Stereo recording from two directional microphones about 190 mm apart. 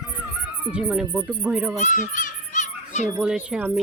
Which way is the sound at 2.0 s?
40° left (ahead or behind).